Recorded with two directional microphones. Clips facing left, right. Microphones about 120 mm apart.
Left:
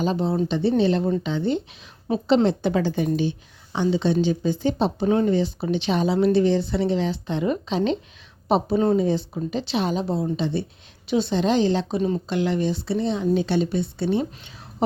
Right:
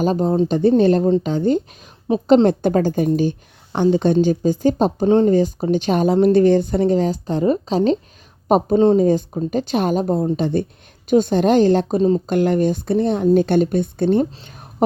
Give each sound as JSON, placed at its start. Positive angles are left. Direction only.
{"t": 0.0, "sound": "speech", "side_deg": -45}
{"t": 5.0, "sound": "speech", "side_deg": -30}
{"t": 5.3, "sound": "speech", "side_deg": -45}
{"t": 9.0, "sound": "speech", "side_deg": -45}
{"t": 11.9, "sound": "speech", "side_deg": -35}
{"t": 12.3, "sound": "speech", "side_deg": -50}